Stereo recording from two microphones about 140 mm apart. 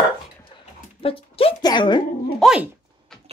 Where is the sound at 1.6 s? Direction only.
30° left (ahead or behind).